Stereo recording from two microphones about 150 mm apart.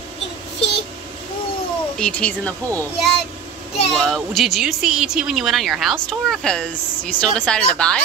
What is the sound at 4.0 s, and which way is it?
Speech, centre (ahead or behind).